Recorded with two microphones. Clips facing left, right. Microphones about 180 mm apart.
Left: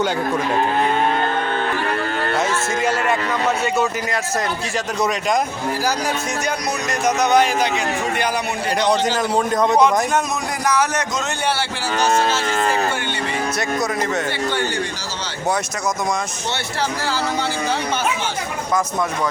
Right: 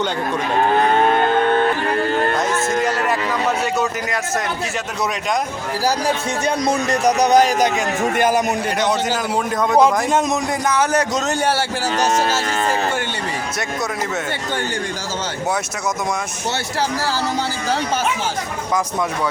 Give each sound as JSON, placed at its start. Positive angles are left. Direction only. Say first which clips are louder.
{"t": 2.7, "sound": "a man's voice", "louder": "even", "side_deg": 0}
{"t": 6.7, "sound": "a man's voice", "louder": "right 4 dB", "side_deg": -35}
{"t": 8.9, "sound": "a man's voice", "louder": "left 2 dB", "side_deg": -5}
{"t": 9.7, "sound": "a man's voice", "louder": "right 4 dB", "side_deg": -25}